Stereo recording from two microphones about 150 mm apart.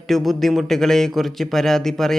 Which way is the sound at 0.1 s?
Centre (ahead or behind).